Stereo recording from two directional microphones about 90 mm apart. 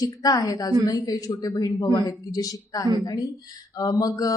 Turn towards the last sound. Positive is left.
turn(degrees=45)  # may be behind; listen again after turning